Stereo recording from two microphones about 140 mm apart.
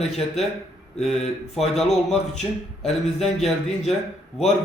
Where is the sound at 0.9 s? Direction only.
5° left (ahead or behind).